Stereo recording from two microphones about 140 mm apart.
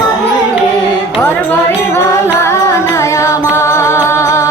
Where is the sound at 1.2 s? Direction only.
15° left (ahead or behind).